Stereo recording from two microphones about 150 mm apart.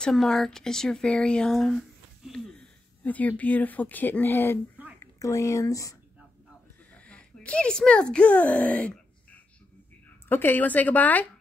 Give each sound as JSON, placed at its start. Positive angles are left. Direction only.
{"t": 0.0, "sound": "speech", "side_deg": 0}
{"t": 6.9, "sound": "a sound", "side_deg": 10}
{"t": 10.2, "sound": "speech", "side_deg": 15}